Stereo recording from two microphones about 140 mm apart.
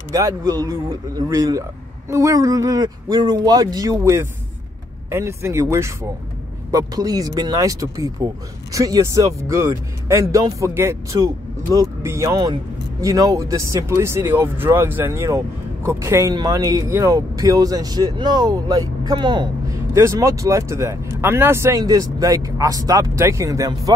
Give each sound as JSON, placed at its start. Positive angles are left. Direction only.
{"t": 0.1, "sound": "speech", "side_deg": -25}
{"t": 19.9, "sound": "speech", "side_deg": -20}